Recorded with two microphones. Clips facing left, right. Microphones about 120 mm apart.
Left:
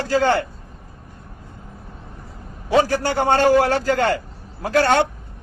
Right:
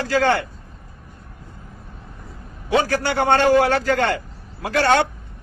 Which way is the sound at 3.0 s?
40° left (ahead or behind).